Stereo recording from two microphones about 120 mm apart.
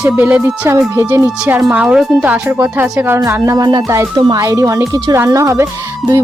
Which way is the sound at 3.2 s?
25° right (ahead or behind).